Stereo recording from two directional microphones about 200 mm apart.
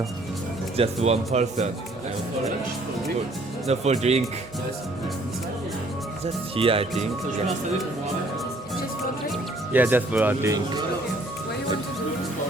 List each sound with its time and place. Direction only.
1.0 s speech: 35° right (ahead or behind)
3.7 s speech: 35° right (ahead or behind)
6.2 s speech: 30° right (ahead or behind)
9.3 s speech: 10° right (ahead or behind)